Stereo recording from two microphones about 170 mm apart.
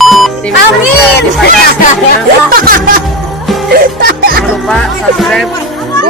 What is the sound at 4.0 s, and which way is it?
Music, 60° right (ahead or behind).